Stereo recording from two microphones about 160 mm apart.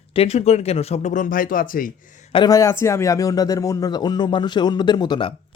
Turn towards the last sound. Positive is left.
turn(degrees=25)  # may be behind; listen again after turning